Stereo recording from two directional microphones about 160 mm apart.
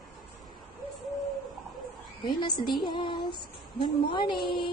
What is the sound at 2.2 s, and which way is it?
Female singing, 30° left (ahead or behind).